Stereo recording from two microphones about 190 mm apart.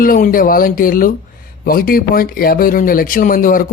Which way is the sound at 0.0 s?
45° left (ahead or behind).